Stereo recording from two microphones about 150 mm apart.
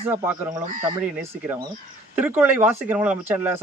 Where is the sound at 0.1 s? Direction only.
15° right (ahead or behind).